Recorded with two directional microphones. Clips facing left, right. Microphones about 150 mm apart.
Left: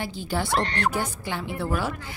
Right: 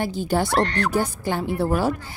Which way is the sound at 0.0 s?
45° right (ahead or behind).